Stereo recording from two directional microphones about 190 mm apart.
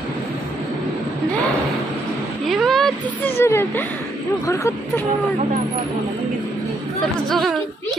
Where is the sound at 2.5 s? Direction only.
Centre (ahead or behind).